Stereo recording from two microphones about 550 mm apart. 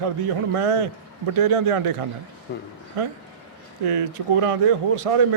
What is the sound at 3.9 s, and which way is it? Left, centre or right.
Speech, right.